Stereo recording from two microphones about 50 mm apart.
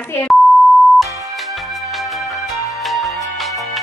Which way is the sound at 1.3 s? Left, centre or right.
Centre.